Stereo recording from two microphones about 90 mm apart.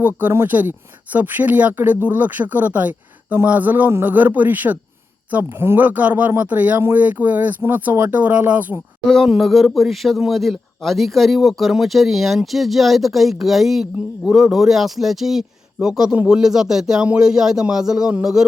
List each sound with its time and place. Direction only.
0.0 s speech: 25° right (ahead or behind)
9.0 s a man's voice: centre (ahead or behind)